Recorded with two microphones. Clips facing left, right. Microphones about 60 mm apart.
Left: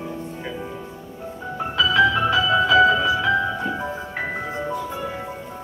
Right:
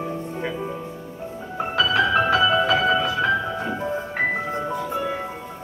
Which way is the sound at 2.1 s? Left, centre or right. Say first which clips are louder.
Right 1 dB; right.